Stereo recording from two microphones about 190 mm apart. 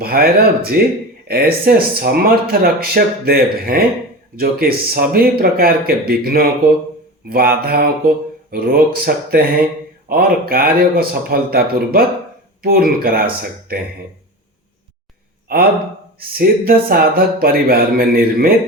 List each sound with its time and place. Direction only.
0.0 s speech: 50° right (ahead or behind)
15.5 s speech: 50° right (ahead or behind)